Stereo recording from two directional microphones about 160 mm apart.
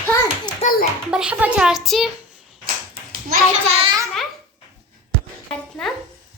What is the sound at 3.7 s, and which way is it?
Speech, 35° right (ahead or behind).